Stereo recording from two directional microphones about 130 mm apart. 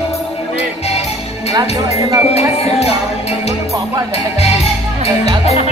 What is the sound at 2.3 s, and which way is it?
Speech, 55° left (ahead or behind).